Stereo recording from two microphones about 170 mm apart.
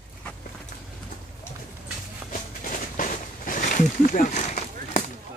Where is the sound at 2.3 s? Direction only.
50° left (ahead or behind).